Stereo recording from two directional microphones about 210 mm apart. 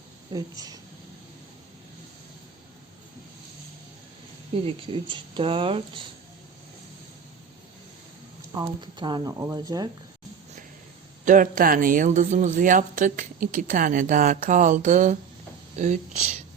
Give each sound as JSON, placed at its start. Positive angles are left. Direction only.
{"t": 0.3, "sound": "speech", "side_deg": -15}
{"t": 4.5, "sound": "speech", "side_deg": -25}
{"t": 8.5, "sound": "speech", "side_deg": -20}
{"t": 11.3, "sound": "a woman's voice", "side_deg": -40}